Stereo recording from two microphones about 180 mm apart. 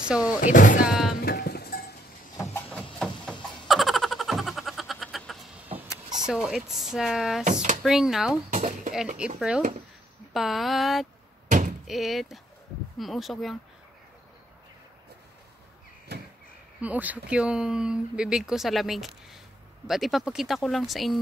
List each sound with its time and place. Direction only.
0.4 s speech: 45° left (ahead or behind)
0.8 s music: centre (ahead or behind)
1.2 s cowbell: 60° left (ahead or behind)
2.5 s a sound: 5° left (ahead or behind)
5.7 s vehicle: 20° right (ahead or behind)
6.2 s speech: 5° right (ahead or behind)
8.5 s a sound: 40° right (ahead or behind)
8.9 s speech: 5° right (ahead or behind)
9.6 s speech: 45° right (ahead or behind)
10.3 s speech: centre (ahead or behind)
11.4 s a sound: 45° right (ahead or behind)
11.9 s speech: centre (ahead or behind)
16.8 s speech: 10° right (ahead or behind)